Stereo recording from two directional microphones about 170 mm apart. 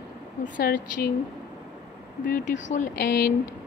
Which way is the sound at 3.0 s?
65° left (ahead or behind).